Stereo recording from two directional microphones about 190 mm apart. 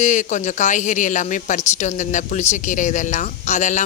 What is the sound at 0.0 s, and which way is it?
Speech, 40° left (ahead or behind).